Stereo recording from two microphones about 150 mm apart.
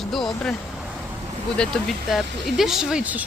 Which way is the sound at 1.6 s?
5° left (ahead or behind).